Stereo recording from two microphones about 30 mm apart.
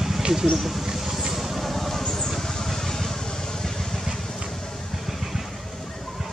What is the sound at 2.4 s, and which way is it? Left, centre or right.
Vehicle, centre.